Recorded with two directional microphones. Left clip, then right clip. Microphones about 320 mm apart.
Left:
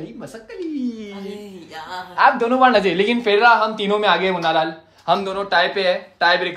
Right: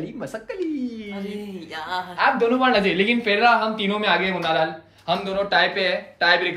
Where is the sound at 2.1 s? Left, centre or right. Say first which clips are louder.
Left 5 dB; centre.